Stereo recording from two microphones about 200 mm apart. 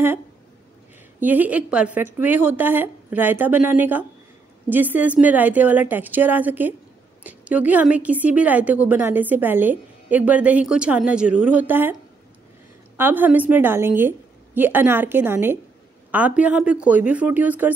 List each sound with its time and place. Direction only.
1.2 s a woman's voice: 10° right (ahead or behind)
12.9 s a woman's voice: 10° right (ahead or behind)